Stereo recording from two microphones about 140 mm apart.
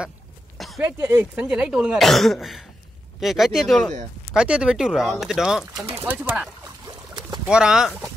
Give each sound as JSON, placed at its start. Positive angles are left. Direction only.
{"t": 0.7, "sound": "speech", "side_deg": -20}